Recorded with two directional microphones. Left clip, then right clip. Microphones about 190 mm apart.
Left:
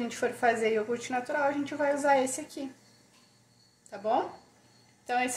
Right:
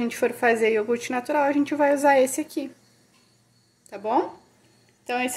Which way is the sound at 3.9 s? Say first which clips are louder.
Right 5 dB; 40° right (ahead or behind).